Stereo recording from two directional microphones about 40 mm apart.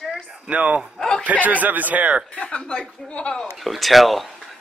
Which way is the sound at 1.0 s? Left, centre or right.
Centre.